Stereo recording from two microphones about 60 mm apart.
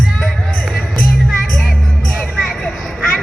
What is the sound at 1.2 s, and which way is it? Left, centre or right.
Music, centre.